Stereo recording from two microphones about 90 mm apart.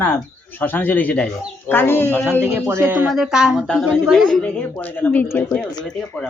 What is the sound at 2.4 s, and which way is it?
Speech, 30° right (ahead or behind).